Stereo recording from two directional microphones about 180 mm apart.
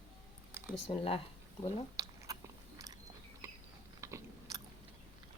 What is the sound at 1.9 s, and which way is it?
Biting, 20° right (ahead or behind).